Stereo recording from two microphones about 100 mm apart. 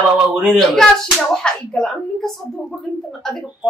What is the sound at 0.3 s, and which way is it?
Speech, 10° right (ahead or behind).